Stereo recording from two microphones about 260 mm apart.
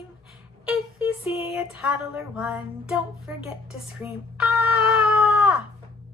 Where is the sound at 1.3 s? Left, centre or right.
Left.